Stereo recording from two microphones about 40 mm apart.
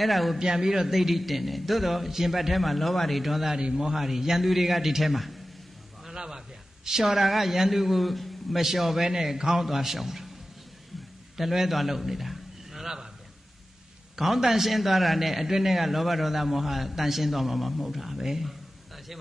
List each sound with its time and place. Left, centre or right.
0.0 s a man's voice: centre
0.4 s a man's voice: centre
6.1 s a man's voice: centre
11.3 s a sound: centre
14.1 s a man's voice: centre